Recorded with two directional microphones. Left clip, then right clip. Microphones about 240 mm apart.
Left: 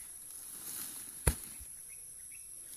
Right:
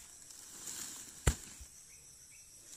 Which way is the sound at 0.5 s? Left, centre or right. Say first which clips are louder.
Right 3 dB; centre.